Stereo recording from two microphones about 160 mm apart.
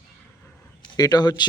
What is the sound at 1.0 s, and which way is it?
Speech, 25° left (ahead or behind).